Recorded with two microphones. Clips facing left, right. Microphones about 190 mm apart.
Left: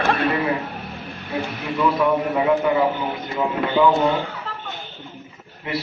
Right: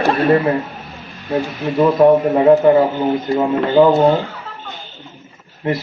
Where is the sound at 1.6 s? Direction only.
40° right (ahead or behind).